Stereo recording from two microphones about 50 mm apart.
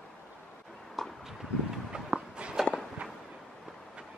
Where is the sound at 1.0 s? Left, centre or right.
Centre.